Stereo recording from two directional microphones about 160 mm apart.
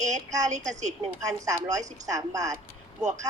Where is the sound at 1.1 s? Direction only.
20° right (ahead or behind).